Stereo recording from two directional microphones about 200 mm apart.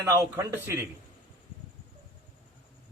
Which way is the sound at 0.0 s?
15° right (ahead or behind).